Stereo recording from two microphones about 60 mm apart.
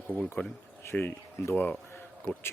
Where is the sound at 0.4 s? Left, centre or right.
Left.